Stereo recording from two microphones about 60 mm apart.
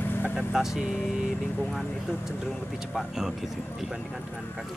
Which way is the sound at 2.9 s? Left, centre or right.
Centre.